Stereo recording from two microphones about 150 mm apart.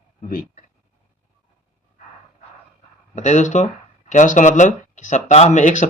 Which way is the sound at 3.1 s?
50° left (ahead or behind).